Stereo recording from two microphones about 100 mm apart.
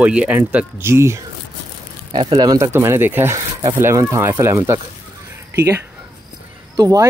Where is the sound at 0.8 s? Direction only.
30° right (ahead or behind).